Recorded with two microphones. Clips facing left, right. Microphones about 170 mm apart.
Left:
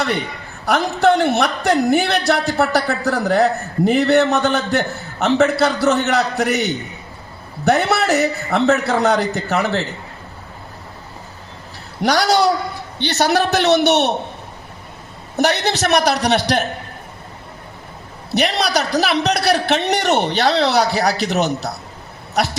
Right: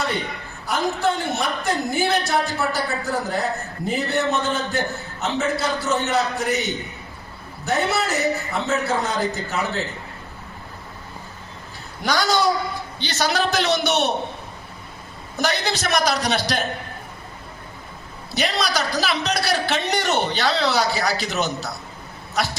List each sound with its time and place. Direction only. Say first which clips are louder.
0.6 s speech: left 6 dB; 70° left (ahead or behind)
12.0 s a man's voice: left 5 dB; 70° left (ahead or behind)
15.4 s a man's voice: left 6 dB; 65° left (ahead or behind)
18.3 s a man's voice: left 5 dB; 65° left (ahead or behind)